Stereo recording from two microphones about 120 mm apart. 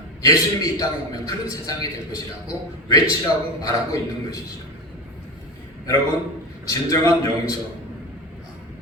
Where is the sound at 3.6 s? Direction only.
30° left (ahead or behind).